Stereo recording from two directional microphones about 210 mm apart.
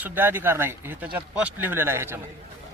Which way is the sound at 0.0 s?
10° right (ahead or behind).